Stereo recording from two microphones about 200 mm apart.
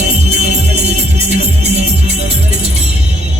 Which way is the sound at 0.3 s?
35° right (ahead or behind).